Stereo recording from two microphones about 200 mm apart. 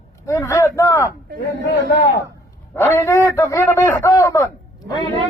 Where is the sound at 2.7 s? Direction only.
10° left (ahead or behind).